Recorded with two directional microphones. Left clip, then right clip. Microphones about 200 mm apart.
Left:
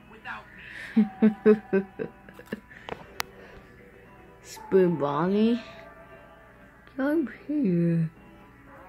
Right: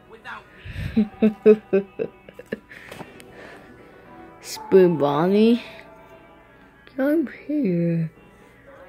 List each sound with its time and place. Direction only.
0.7 s speech: 10° right (ahead or behind)
4.5 s speech: 25° right (ahead or behind)
7.0 s speech: 15° right (ahead or behind)